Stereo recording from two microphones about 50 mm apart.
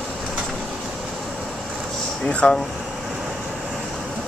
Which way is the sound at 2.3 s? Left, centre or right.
Left.